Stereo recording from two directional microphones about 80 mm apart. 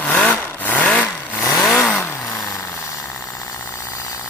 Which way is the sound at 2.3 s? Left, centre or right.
Left.